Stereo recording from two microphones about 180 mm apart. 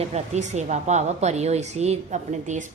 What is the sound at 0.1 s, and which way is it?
A woman's voice, 40° right (ahead or behind).